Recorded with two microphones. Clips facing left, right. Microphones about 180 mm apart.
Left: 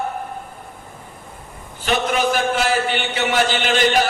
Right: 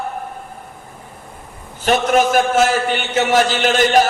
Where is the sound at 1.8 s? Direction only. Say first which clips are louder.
Right 5 dB; 45° right (ahead or behind).